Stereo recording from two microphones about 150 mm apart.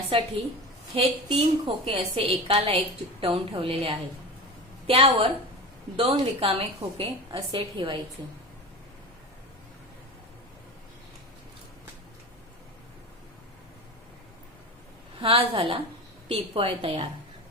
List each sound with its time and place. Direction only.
0.1 s a woman's voice: 40° right (ahead or behind)
15.2 s a woman's voice: 35° right (ahead or behind)